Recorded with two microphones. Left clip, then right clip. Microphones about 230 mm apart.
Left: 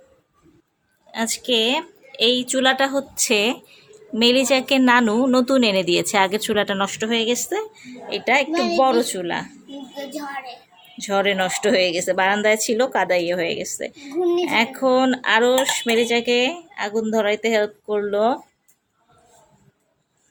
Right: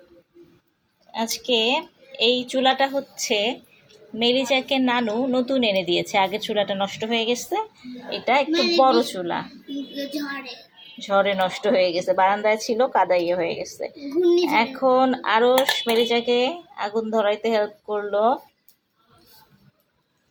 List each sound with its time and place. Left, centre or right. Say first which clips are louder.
1.1 s a woman's voice: left 1 dB; centre
10.9 s a woman's voice: even; centre